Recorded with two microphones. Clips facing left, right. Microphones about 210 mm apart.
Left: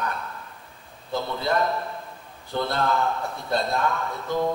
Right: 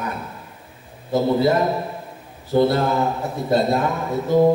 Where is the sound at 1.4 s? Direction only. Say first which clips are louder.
Right 6 dB; 10° right (ahead or behind).